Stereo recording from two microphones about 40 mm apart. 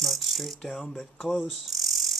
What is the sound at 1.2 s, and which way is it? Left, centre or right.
Mechanisms, centre.